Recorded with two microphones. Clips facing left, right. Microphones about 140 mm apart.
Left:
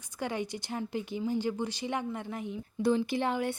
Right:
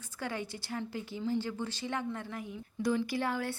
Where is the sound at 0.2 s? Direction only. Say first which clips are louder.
Left 4 dB; 15° left (ahead or behind).